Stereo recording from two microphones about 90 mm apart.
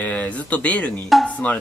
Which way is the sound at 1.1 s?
Centre (ahead or behind).